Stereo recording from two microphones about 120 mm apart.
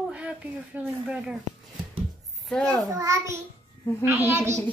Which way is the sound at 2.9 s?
25° right (ahead or behind).